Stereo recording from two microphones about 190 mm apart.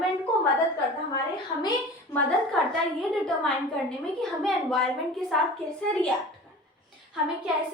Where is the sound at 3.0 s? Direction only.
Centre (ahead or behind).